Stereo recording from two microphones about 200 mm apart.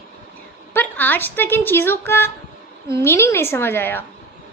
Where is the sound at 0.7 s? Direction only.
10° left (ahead or behind).